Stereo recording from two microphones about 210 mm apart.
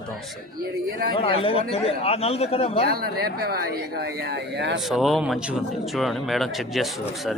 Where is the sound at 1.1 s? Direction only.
25° left (ahead or behind).